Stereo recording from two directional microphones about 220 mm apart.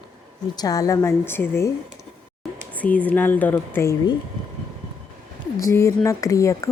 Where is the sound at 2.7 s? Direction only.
5° left (ahead or behind).